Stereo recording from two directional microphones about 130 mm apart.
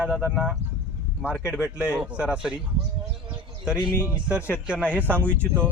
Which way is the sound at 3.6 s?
5° right (ahead or behind).